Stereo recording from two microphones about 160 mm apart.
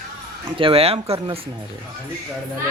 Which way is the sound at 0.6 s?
35° right (ahead or behind).